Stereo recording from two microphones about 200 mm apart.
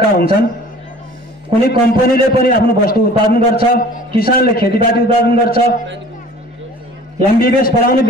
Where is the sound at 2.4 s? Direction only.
45° left (ahead or behind).